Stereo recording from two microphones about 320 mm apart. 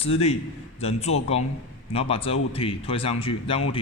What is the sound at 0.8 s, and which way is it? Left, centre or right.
A man's voice, centre.